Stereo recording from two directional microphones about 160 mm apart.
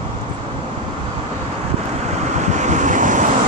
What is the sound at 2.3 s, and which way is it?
Waves, 50° right (ahead or behind).